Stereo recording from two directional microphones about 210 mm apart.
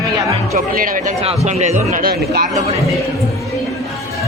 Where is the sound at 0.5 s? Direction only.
40° right (ahead or behind).